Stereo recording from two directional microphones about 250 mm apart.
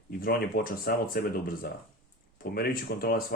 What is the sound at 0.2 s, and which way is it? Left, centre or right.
Speech, left.